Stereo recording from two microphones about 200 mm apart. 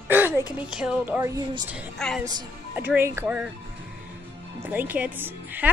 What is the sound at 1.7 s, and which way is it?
Speech, centre (ahead or behind).